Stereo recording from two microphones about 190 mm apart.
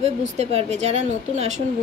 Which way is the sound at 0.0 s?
35° right (ahead or behind).